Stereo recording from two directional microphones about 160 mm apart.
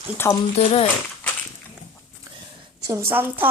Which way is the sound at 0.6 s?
40° left (ahead or behind).